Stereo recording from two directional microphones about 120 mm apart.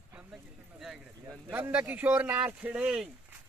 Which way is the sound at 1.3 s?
20° right (ahead or behind).